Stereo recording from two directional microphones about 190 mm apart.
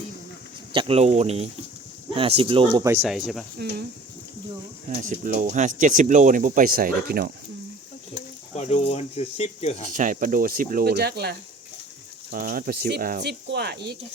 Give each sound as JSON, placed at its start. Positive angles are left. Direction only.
{"t": 0.7, "sound": "speech", "side_deg": -30}
{"t": 2.8, "sound": "speech", "side_deg": -10}
{"t": 3.1, "sound": "speech", "side_deg": 0}
{"t": 4.9, "sound": "speech", "side_deg": -40}
{"t": 8.5, "sound": "speech", "side_deg": 35}
{"t": 9.9, "sound": "speech", "side_deg": -45}
{"t": 13.1, "sound": "speech", "side_deg": -65}